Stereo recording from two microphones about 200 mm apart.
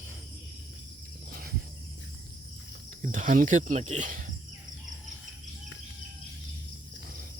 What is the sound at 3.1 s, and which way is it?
Speech, 40° right (ahead or behind).